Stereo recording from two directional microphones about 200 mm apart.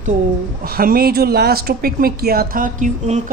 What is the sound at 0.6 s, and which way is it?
Speech, 45° right (ahead or behind).